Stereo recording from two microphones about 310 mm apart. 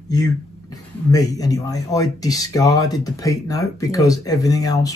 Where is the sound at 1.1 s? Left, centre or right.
Centre.